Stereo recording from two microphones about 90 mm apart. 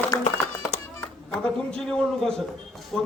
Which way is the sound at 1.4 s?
10° left (ahead or behind).